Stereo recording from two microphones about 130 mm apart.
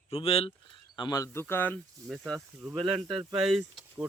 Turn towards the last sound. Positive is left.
turn(degrees=-5)  # may be behind; listen again after turning